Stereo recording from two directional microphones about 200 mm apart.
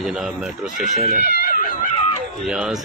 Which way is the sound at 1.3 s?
45° left (ahead or behind).